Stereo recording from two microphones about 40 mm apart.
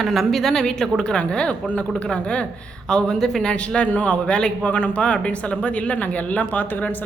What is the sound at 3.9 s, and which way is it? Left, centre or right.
Speech, left.